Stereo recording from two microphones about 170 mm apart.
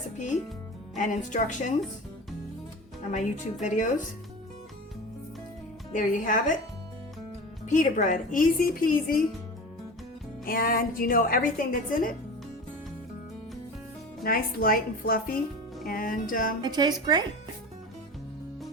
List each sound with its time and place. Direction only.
0.9 s a woman's voice: 45° left (ahead or behind)
3.1 s a woman's voice: 45° left (ahead or behind)
5.9 s a woman's voice: 50° left (ahead or behind)
7.7 s a woman's voice: 45° left (ahead or behind)
10.4 s a woman's voice: 60° left (ahead or behind)
14.3 s a woman's voice: 60° left (ahead or behind)
16.6 s speech: 25° right (ahead or behind)